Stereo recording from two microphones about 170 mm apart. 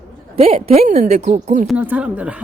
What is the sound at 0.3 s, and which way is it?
Speech, 35° right (ahead or behind).